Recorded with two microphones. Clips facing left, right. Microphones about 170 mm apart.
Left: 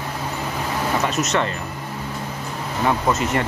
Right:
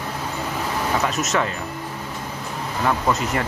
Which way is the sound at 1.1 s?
Centre (ahead or behind).